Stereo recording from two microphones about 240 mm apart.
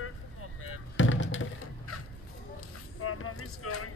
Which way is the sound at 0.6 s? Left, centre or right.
Left.